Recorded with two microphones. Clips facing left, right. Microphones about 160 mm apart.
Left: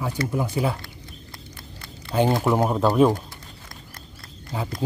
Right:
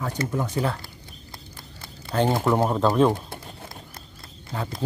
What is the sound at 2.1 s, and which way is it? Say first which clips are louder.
Speech: left 1 dB; 10° left (ahead or behind).